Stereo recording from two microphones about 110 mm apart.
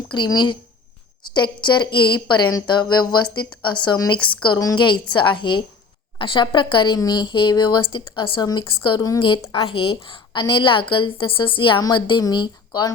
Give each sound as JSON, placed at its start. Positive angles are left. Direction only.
{"t": 0.1, "sound": "speech", "side_deg": 40}
{"t": 9.5, "sound": "speech", "side_deg": 55}